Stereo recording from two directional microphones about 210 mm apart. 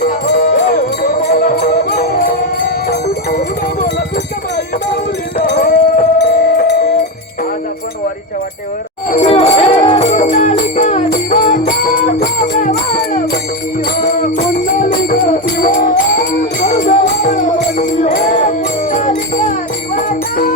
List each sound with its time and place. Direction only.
0.0 s music: 35° left (ahead or behind)
5.4 s music: 45° left (ahead or behind)
9.0 s music: 30° left (ahead or behind)
14.0 s music: 35° left (ahead or behind)